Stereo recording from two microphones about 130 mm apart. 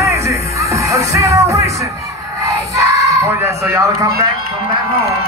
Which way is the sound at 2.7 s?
20° right (ahead or behind).